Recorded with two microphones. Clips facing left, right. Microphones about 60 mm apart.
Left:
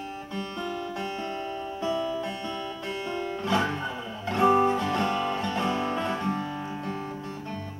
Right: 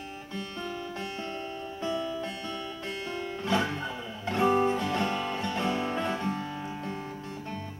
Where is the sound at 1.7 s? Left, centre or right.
Left.